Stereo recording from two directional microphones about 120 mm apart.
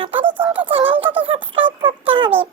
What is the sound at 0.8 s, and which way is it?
Speech, 15° right (ahead or behind).